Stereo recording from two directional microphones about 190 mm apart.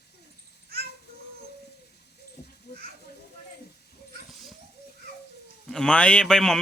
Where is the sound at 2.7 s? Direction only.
60° left (ahead or behind).